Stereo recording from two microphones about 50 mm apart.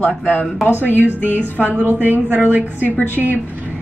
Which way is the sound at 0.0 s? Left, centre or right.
Left.